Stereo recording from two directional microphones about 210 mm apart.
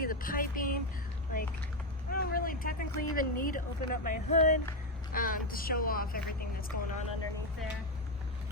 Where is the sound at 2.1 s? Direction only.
45° left (ahead or behind).